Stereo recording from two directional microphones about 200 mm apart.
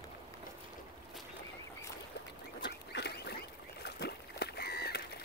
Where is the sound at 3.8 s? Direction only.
55° left (ahead or behind).